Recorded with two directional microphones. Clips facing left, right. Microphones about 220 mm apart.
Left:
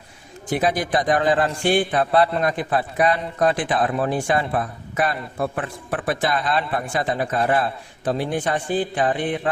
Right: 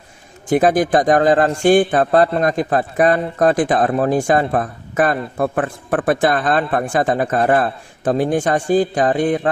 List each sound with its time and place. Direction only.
0.5 s a man's voice: 50° right (ahead or behind)